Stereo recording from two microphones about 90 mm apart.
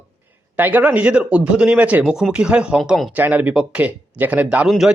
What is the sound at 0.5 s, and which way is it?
A man's voice, 20° right (ahead or behind).